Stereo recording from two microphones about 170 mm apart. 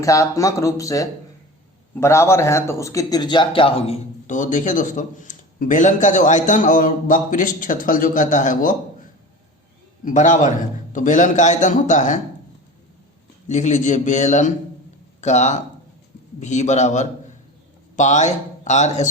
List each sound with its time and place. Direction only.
0.0 s speech: 20° left (ahead or behind); by 8.7 s 50° left (ahead or behind)
10.0 s speech: 50° left (ahead or behind)
13.5 s speech: 45° left (ahead or behind)